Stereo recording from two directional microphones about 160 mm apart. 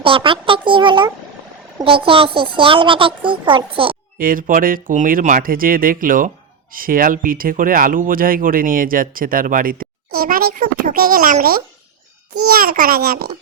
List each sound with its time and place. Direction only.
0.0 s a child's voice: 35° right (ahead or behind)
4.2 s speech: 60° right (ahead or behind)